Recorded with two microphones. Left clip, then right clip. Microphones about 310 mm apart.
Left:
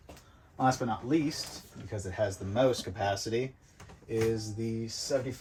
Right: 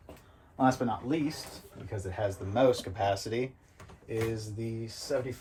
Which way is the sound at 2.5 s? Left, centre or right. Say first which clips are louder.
Right 2 dB; right.